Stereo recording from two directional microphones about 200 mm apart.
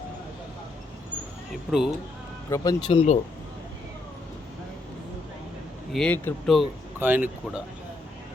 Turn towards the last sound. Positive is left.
turn(degrees=-10)  # may be behind; listen again after turning